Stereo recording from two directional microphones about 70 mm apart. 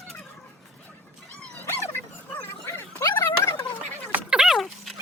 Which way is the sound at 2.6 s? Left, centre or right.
Left.